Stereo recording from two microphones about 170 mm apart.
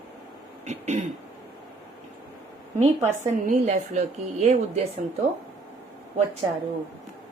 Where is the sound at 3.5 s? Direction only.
45° right (ahead or behind).